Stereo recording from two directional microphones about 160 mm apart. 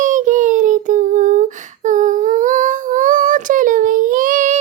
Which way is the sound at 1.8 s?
55° right (ahead or behind).